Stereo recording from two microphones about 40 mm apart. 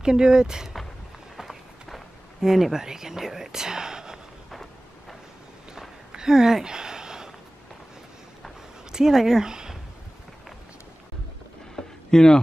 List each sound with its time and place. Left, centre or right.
0.0 s speech: centre
1.3 s run: centre
2.4 s speech: centre
6.1 s a sound: centre
8.9 s speech: centre
11.7 s a sound: centre